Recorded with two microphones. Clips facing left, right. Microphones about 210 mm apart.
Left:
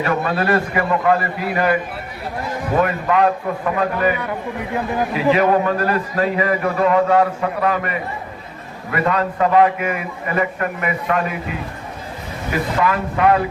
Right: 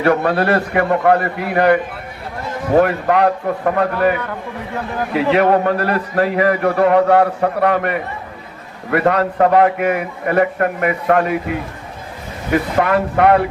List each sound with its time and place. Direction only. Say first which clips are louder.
0.0 s a man's voice: right 5 dB; 65° right (ahead or behind)
4.2 s a man's voice: left 1 dB; 15° left (ahead or behind)
5.1 s a man's voice: right 3 dB; 65° right (ahead or behind)
12.8 s a man's voice: right 2 dB; 65° right (ahead or behind)